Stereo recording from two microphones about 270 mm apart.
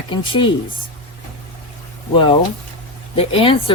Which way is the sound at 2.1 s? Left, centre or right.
Centre.